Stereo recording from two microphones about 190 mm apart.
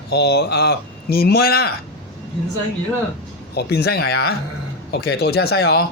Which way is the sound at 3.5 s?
55° left (ahead or behind).